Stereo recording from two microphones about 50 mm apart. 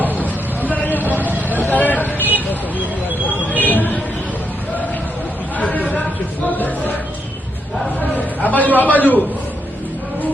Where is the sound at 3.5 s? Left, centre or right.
Left.